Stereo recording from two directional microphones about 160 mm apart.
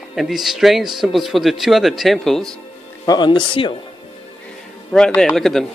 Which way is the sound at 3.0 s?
25° left (ahead or behind).